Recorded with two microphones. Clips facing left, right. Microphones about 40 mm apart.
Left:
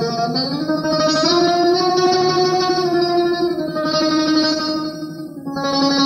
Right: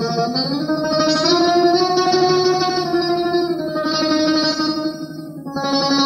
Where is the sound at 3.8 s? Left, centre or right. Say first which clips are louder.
Left 1 dB; centre.